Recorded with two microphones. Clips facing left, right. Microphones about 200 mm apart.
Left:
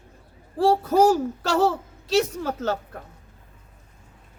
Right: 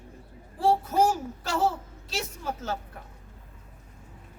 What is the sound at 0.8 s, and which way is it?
A child's voice, 75° left (ahead or behind).